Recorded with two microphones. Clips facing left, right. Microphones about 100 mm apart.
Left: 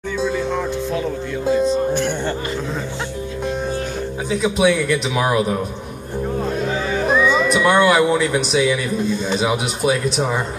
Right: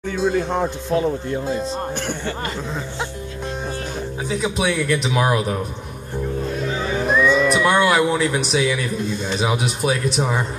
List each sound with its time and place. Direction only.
0.2 s speech: 45° right (ahead or behind)
4.3 s speech: centre (ahead or behind)
7.4 s speech: 5° right (ahead or behind)